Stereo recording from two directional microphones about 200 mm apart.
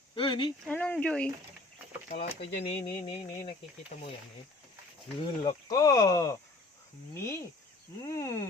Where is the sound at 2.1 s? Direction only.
45° left (ahead or behind).